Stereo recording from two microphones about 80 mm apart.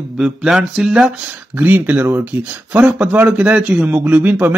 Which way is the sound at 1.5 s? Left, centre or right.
Right.